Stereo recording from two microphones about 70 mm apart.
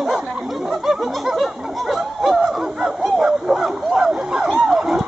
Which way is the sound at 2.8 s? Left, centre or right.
Centre.